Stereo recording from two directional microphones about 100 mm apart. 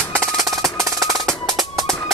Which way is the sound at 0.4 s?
35° right (ahead or behind).